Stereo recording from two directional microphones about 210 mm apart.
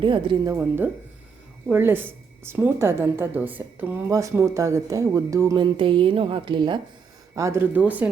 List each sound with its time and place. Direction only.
0.0 s speech: 20° right (ahead or behind)
1.6 s a woman's voice: 10° right (ahead or behind)